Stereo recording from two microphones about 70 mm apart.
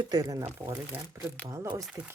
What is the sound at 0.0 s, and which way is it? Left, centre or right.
Speech, right.